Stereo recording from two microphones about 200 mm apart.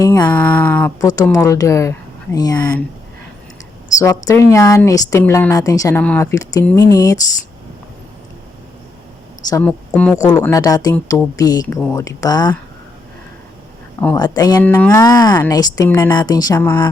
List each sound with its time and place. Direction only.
0.0 s speech: 20° left (ahead or behind)
0.3 s speech: 10° left (ahead or behind)
3.9 s speech: 15° left (ahead or behind)
9.5 s speech: 10° left (ahead or behind)
10.4 s speech: 15° left (ahead or behind)
14.2 s speech: 20° left (ahead or behind)
14.6 s speech: 10° left (ahead or behind)